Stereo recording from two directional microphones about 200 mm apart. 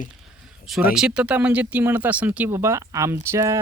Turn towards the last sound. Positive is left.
turn(degrees=-15)  # may be behind; listen again after turning